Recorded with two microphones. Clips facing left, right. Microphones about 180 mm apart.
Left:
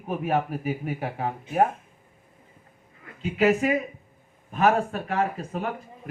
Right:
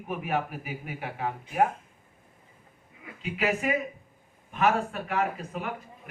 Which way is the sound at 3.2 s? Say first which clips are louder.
Left 7 dB; 35° left (ahead or behind).